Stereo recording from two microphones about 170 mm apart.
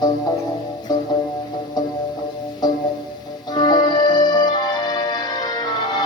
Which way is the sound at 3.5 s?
25° left (ahead or behind).